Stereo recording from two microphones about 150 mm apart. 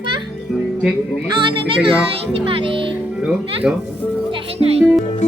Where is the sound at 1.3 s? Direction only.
35° right (ahead or behind).